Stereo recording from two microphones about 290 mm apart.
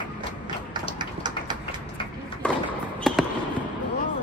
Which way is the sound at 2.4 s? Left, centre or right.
Centre.